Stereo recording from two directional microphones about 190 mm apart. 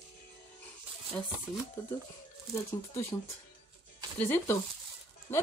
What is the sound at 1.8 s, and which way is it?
Speech, 15° left (ahead or behind).